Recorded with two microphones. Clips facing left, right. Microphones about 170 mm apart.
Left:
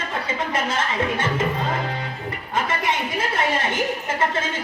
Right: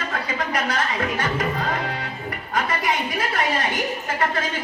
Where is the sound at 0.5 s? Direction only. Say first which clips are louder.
Left 1 dB; 25° left (ahead or behind).